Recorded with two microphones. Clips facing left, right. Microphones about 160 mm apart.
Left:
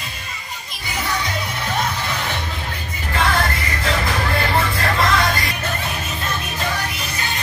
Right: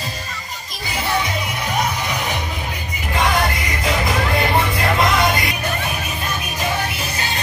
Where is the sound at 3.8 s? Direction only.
15° right (ahead or behind).